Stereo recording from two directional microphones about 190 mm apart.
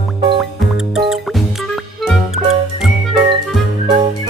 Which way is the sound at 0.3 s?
Centre (ahead or behind).